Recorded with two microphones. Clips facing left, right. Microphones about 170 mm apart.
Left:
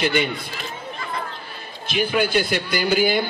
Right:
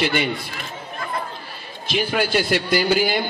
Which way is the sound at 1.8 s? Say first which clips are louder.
Left 1 dB; 55° left (ahead or behind).